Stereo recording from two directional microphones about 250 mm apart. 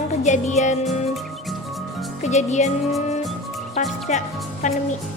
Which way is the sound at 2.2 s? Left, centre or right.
Left.